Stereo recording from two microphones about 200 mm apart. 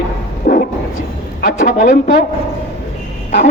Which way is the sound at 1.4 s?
40° left (ahead or behind).